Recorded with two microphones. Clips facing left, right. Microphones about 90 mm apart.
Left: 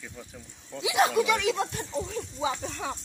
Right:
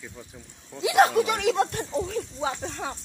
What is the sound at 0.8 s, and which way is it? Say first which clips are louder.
Speech: right 4 dB; 50° right (ahead or behind).